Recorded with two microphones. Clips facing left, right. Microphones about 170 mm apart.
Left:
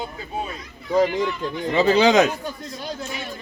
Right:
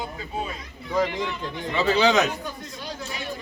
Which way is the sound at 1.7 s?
40° left (ahead or behind).